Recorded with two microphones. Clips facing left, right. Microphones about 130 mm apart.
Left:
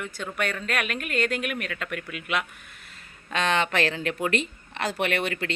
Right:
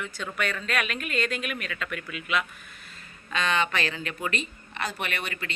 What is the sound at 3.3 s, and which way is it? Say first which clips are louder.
A woman's voice: left 2 dB; 70° left (ahead or behind).